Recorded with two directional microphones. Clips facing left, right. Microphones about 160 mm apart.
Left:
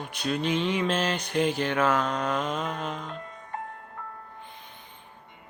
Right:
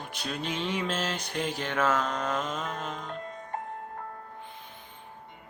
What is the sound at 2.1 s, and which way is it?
Mantra, 10° left (ahead or behind).